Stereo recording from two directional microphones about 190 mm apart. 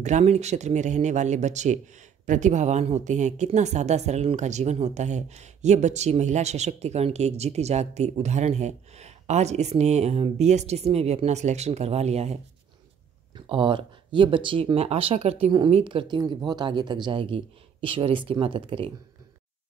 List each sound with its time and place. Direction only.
0.0 s a woman's voice: 35° right (ahead or behind)
13.5 s speech: 25° right (ahead or behind)